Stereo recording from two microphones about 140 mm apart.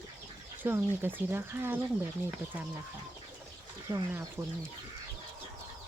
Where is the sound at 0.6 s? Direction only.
15° right (ahead or behind).